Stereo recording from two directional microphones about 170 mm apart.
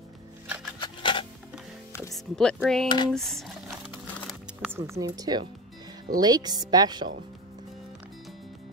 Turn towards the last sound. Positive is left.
turn(degrees=-25)  # may be behind; listen again after turning